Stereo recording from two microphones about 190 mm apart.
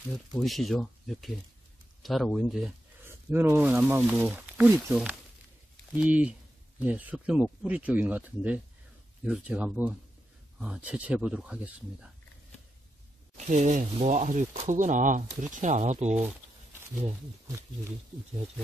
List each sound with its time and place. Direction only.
0.4 s speech: centre (ahead or behind)
3.1 s speech: 15° right (ahead or behind)
13.5 s speech: 40° right (ahead or behind)